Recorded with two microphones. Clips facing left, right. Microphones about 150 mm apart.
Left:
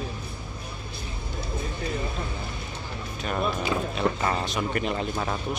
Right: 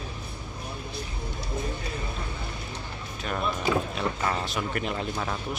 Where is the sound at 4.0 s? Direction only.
5° left (ahead or behind).